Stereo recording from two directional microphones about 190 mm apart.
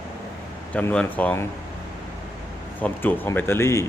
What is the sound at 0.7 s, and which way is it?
Speech, 5° left (ahead or behind).